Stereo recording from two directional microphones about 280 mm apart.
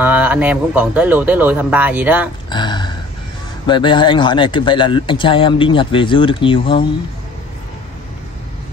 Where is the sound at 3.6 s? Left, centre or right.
Centre.